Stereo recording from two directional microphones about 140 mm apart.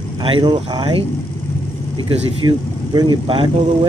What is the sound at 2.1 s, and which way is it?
Speech, 30° right (ahead or behind).